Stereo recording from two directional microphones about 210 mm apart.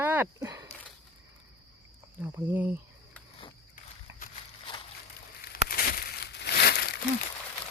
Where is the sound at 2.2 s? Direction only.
10° right (ahead or behind).